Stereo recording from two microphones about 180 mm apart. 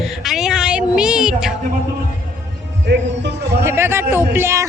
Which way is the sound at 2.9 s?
70° right (ahead or behind).